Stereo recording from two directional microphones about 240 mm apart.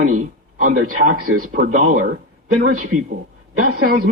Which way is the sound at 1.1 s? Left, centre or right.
Right.